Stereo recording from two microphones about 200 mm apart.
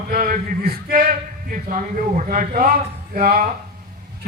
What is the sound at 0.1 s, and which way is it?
A man's voice, 45° right (ahead or behind).